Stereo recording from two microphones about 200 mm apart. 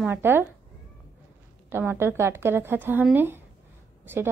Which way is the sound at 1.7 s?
10° right (ahead or behind).